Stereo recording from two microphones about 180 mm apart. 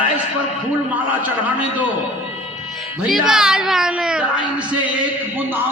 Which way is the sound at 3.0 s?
5° right (ahead or behind).